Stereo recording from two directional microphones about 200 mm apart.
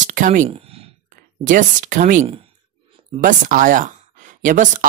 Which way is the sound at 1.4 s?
40° right (ahead or behind).